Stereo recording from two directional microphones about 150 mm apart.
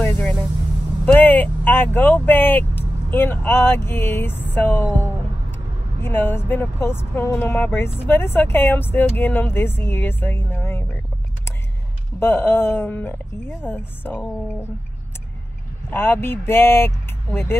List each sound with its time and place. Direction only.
0.0 s vehicle: 10° left (ahead or behind)
1.0 s speech: 10° left (ahead or behind)
6.0 s speech: 15° left (ahead or behind)
12.2 s speech: 15° left (ahead or behind)
15.9 s speech: 15° left (ahead or behind)